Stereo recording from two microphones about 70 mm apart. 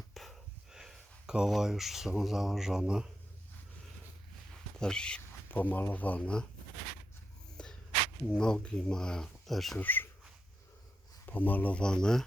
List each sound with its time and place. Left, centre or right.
0.1 s a sound: centre
4.8 s speech: centre
5.5 s speech: left
7.5 s a sound: centre
8.3 s speech: centre
9.7 s speech: left
11.3 s speech: left
11.8 s speech: centre